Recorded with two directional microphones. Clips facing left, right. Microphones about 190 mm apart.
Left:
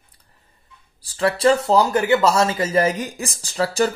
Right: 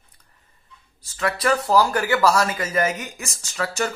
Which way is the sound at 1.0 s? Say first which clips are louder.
Left 6 dB; 35° left (ahead or behind).